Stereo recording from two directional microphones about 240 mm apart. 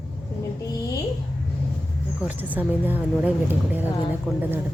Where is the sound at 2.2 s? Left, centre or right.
Centre.